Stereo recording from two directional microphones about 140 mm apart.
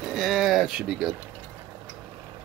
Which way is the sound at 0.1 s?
Centre (ahead or behind).